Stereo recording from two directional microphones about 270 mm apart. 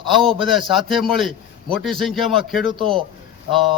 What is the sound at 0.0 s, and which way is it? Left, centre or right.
Speech, centre.